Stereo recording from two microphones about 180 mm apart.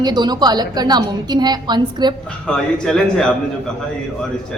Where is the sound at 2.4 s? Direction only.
5° left (ahead or behind).